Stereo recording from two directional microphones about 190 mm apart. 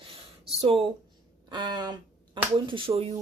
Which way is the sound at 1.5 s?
20° right (ahead or behind).